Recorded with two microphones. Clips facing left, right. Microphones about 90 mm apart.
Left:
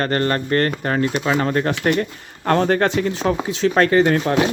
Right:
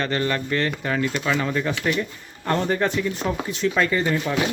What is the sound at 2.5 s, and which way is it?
Speech, 85° left.